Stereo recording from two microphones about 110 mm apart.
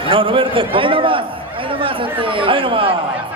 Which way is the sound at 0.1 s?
55° right (ahead or behind).